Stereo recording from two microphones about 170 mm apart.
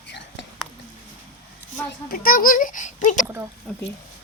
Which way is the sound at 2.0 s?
60° left (ahead or behind).